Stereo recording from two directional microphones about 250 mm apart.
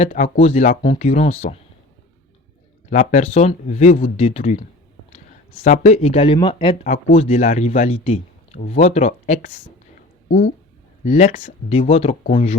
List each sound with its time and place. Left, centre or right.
0.0 s speech: left
2.9 s speech: left
11.0 s speech: left